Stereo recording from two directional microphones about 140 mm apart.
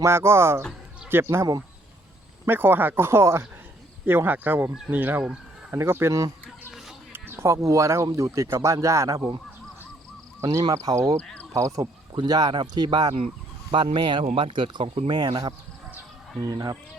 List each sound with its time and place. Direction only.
0.0 s speech: 20° right (ahead or behind)
10.4 s speech: 30° right (ahead or behind)
11.2 s speech: 10° left (ahead or behind)
11.5 s speech: 25° right (ahead or behind)